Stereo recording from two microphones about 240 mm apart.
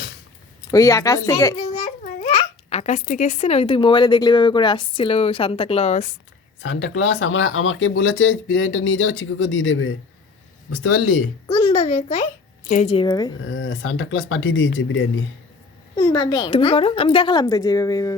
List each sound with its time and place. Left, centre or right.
0.7 s speech: centre
2.2 s a child's voice: left
6.6 s speech: left
11.4 s a child's voice: left
13.4 s speech: left
16.0 s a child's voice: centre